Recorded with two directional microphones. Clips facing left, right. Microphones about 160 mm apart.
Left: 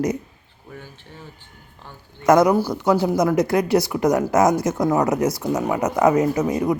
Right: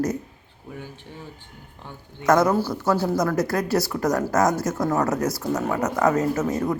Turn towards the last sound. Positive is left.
turn(degrees=15)  # may be behind; listen again after turning